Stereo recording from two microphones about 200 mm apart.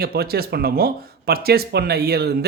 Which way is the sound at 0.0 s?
50° right (ahead or behind).